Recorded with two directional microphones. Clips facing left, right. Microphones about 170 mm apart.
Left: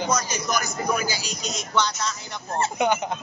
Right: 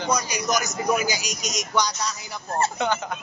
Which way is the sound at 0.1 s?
15° right (ahead or behind).